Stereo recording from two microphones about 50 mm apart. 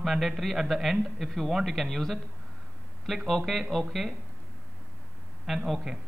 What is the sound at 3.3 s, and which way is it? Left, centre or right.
Speech, centre.